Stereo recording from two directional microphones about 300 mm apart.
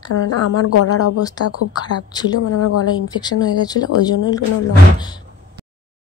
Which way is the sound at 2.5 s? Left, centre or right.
Left.